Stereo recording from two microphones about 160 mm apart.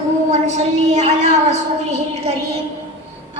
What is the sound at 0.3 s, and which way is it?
A woman's voice, 45° right (ahead or behind).